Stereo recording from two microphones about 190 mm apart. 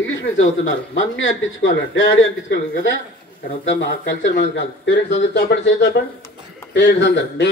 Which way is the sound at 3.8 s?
70° left (ahead or behind).